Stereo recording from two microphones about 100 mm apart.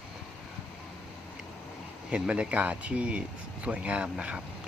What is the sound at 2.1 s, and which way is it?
Speech, 10° right (ahead or behind).